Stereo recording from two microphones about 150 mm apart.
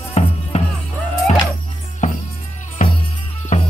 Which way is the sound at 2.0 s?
55° left (ahead or behind).